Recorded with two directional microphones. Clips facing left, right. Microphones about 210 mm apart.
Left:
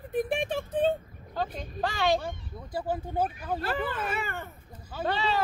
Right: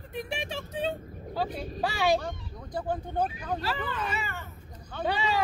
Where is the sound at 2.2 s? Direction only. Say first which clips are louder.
Even; 5° left (ahead or behind).